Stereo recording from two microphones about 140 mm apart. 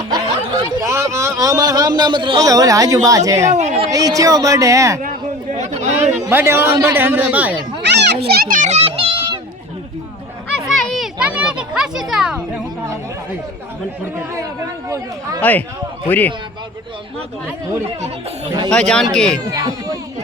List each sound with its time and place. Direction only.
0.1 s a sound: 25° right (ahead or behind)
2.4 s a woman's voice: 25° right (ahead or behind)
3.5 s a sound: 55° right (ahead or behind)
3.9 s a woman's voice: 25° right (ahead or behind)
5.5 s chatter: 55° right (ahead or behind)
6.3 s a man's voice: 15° right (ahead or behind)
8.3 s a sound: 85° right; by 9.4 s 35° right (ahead or behind)
10.7 s children playing: centre (ahead or behind)
14.8 s a woman's voice: 20° right (ahead or behind)
15.4 s a man's voice: 10° left (ahead or behind)
18.7 s speech: 5° left (ahead or behind)
19.5 s a woman's voice: 30° right (ahead or behind)